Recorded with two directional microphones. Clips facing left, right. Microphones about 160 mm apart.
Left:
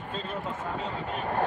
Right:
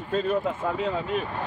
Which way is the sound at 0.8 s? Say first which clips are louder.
Right 7 dB; 80° right.